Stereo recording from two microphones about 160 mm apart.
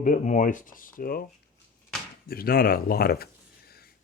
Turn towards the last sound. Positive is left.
turn(degrees=70)  # may be behind; listen again after turning